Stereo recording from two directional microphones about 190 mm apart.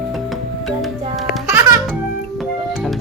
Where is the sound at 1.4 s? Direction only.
15° right (ahead or behind).